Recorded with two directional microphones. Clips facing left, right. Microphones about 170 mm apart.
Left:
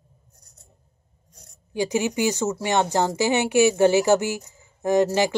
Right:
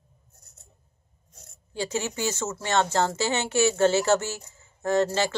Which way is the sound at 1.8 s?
15° left (ahead or behind).